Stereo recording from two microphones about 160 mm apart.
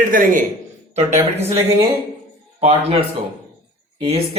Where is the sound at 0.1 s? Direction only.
55° right (ahead or behind).